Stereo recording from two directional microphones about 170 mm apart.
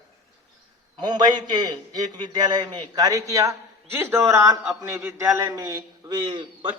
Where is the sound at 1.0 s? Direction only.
25° right (ahead or behind).